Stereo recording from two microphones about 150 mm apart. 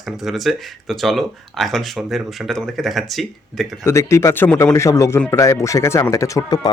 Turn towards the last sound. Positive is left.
turn(degrees=20)  # may be behind; listen again after turning